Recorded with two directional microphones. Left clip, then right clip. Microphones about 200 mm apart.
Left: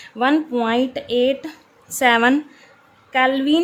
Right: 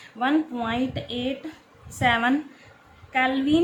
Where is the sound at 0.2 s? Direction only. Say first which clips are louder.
Left 6 dB; 45° left (ahead or behind).